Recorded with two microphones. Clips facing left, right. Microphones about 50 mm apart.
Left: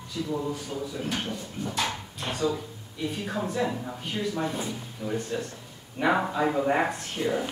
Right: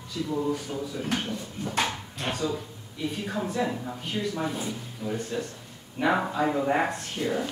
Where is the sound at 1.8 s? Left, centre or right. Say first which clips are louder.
Right 3 dB; centre.